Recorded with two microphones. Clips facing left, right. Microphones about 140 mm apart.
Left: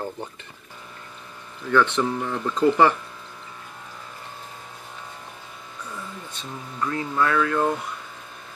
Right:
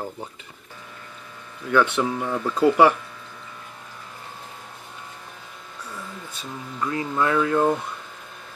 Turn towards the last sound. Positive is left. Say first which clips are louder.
# right 2 dB
turn(degrees=-20)  # may be behind; listen again after turning